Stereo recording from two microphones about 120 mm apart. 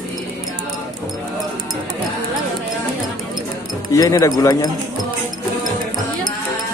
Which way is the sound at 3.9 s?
25° left (ahead or behind).